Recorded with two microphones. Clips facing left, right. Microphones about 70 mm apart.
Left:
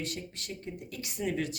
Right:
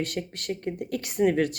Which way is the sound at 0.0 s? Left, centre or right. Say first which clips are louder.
Right 8 dB; right.